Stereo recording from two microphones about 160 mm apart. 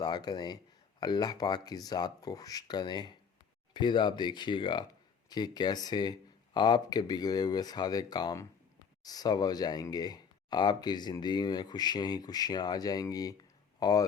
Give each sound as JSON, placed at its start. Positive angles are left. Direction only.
{"t": 0.0, "sound": "speech", "side_deg": 25}